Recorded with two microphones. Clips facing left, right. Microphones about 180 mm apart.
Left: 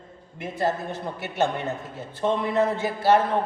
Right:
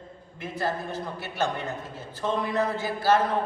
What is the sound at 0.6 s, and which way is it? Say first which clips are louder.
A man's voice: left 4 dB; 20° left (ahead or behind).